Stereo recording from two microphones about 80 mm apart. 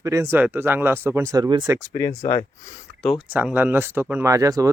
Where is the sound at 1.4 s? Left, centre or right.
Right.